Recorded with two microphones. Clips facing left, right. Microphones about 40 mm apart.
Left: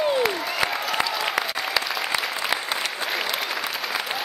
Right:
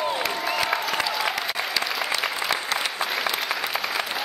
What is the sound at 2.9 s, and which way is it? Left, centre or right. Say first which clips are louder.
Applause: right 1 dB; centre.